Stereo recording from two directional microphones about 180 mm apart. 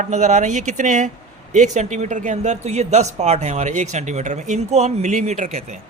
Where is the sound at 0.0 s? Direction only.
40° right (ahead or behind).